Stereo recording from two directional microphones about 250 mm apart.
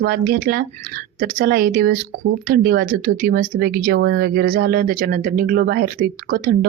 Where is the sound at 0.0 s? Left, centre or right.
Right.